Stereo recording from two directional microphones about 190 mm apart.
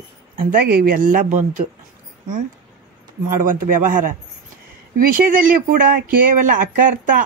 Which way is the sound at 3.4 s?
45° right (ahead or behind).